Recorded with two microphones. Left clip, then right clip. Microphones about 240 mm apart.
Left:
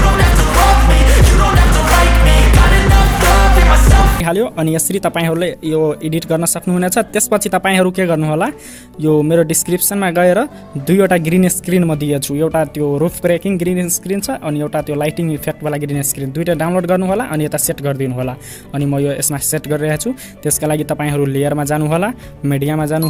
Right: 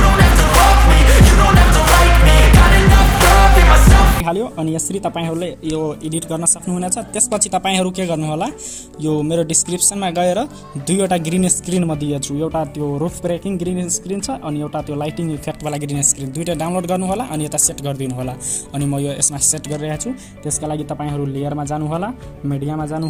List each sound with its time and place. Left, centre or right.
0.0 s music: centre
4.3 s speech: left